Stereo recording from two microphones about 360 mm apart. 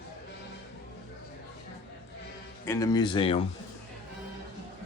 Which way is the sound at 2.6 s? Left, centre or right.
Centre.